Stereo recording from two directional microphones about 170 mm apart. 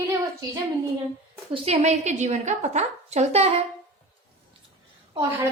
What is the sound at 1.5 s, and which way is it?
A woman's voice, 35° right (ahead or behind).